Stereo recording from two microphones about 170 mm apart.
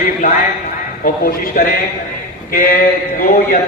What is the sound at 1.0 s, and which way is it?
A man's voice, 55° left (ahead or behind).